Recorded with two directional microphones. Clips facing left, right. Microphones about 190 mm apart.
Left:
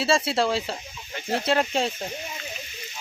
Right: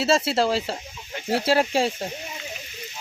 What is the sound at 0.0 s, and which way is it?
Speech, centre (ahead or behind).